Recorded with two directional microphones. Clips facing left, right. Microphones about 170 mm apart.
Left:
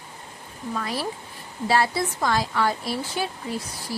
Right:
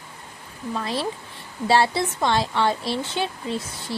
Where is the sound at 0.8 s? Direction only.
25° right (ahead or behind).